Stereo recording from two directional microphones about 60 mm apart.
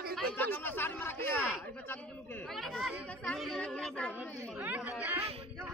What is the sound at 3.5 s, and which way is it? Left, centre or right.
Speech, centre.